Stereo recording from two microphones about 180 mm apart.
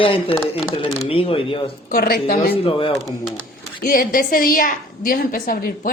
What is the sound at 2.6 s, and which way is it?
Speech, 30° left (ahead or behind).